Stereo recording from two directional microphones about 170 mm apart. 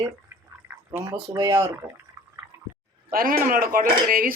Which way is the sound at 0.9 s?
10° right (ahead or behind).